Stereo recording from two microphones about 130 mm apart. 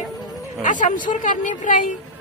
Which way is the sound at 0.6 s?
85° left.